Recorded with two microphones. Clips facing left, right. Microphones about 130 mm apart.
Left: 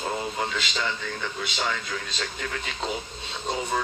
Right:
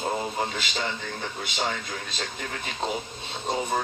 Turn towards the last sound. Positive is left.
turn(degrees=-50)  # may be behind; listen again after turning